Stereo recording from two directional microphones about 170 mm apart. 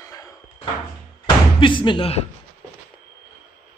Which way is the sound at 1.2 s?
30° left (ahead or behind).